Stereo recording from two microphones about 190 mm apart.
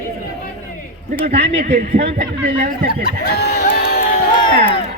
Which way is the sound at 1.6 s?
45° right (ahead or behind).